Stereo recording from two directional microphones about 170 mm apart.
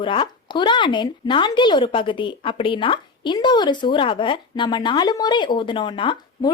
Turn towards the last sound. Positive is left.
turn(degrees=25)  # may be behind; listen again after turning